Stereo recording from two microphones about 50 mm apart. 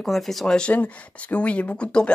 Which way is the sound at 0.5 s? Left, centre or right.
Centre.